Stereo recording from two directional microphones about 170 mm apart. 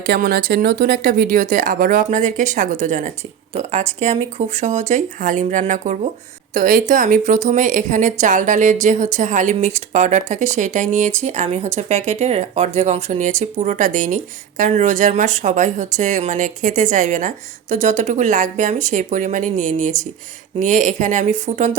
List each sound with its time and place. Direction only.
0.0 s a woman's voice: 60° right (ahead or behind); by 21.7 s 40° right (ahead or behind)